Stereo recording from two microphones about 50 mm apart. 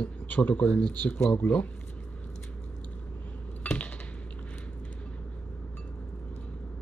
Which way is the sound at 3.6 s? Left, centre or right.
Left.